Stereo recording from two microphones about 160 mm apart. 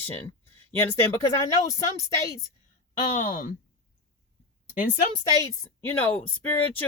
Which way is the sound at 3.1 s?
50° left (ahead or behind).